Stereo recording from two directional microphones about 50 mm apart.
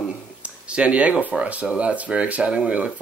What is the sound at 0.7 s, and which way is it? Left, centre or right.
Speech, right.